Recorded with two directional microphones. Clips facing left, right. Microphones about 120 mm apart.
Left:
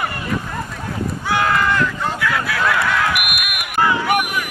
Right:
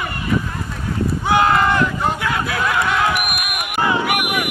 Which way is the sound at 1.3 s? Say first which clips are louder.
Right 3 dB; 25° right (ahead or behind).